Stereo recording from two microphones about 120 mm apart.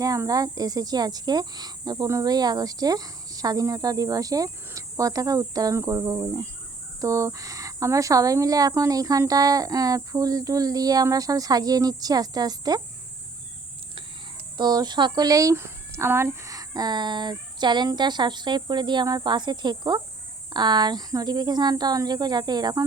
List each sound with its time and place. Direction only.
0.0 s speech: 30° right (ahead or behind)
14.6 s speech: 35° right (ahead or behind)